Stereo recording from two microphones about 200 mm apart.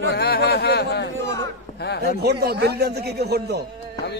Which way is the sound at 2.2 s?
55° right (ahead or behind).